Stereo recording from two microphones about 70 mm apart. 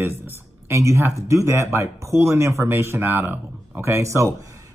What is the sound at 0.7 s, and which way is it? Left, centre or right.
Speech, right.